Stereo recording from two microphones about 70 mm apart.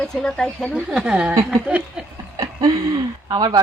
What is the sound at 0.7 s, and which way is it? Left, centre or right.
Speech, centre.